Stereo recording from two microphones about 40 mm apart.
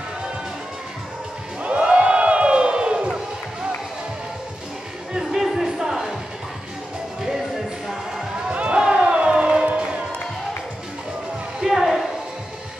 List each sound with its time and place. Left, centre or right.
1.6 s music: right
5.3 s music: centre
7.2 s music: centre
8.5 s a sound: right
8.8 s siren: right
9.7 s music: right
11.6 s a sound: centre